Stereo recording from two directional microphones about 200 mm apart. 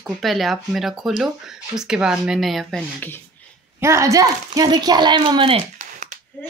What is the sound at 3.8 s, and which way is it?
Speech, 15° right (ahead or behind).